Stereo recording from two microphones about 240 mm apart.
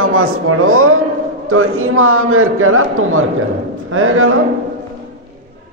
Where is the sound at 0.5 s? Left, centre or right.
Right.